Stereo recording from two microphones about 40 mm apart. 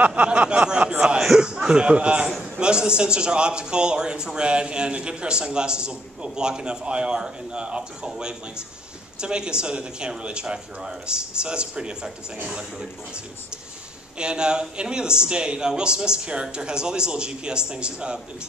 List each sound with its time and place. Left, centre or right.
0.0 s a sound: right
1.3 s chuckle: right
1.7 s a man's voice: right
14.1 s a man's voice: right